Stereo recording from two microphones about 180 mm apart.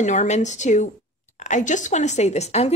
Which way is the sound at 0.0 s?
40° left (ahead or behind).